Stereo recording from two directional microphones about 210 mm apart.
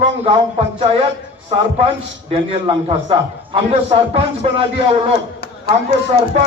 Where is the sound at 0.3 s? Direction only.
30° right (ahead or behind).